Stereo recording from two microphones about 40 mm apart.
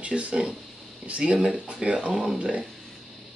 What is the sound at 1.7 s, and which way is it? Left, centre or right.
Speech, right.